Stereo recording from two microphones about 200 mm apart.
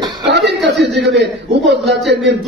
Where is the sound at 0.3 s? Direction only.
60° right (ahead or behind).